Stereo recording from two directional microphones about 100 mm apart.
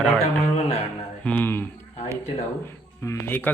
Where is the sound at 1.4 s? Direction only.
20° left (ahead or behind).